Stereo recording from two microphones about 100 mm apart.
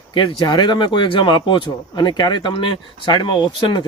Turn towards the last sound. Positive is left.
turn(degrees=50)  # may be behind; listen again after turning